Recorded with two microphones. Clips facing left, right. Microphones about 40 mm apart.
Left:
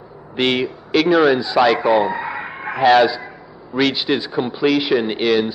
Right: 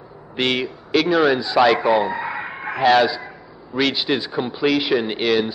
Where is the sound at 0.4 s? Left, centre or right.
Centre.